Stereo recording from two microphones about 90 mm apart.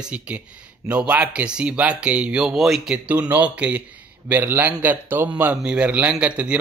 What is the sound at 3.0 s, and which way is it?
Speech, 20° right (ahead or behind).